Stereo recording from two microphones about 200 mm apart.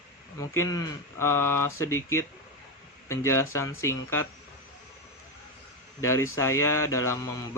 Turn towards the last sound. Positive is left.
turn(degrees=15)  # may be behind; listen again after turning